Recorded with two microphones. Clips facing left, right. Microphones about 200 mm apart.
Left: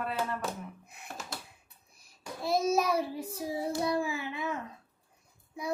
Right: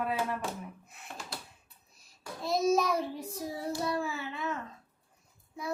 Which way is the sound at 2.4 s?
10° left (ahead or behind).